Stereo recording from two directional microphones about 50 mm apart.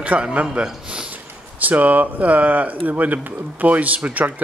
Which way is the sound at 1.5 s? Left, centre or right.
Right.